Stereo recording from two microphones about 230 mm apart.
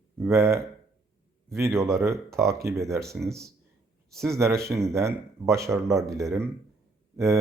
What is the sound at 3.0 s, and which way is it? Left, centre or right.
Speech, centre.